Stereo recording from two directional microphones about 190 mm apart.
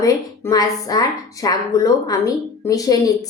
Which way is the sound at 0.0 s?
20° left (ahead or behind).